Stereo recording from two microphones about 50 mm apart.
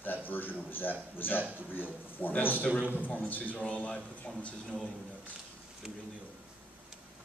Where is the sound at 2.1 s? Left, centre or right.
Left.